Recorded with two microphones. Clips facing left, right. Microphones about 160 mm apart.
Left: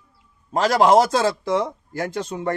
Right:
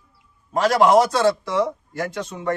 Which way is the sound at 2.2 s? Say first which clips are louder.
Left 3 dB; 30° left (ahead or behind).